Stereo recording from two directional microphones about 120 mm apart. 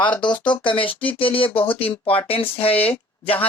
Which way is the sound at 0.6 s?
45° left (ahead or behind).